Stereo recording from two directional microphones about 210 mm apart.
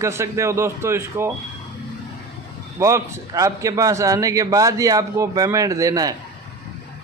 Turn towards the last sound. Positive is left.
turn(degrees=-15)  # may be behind; listen again after turning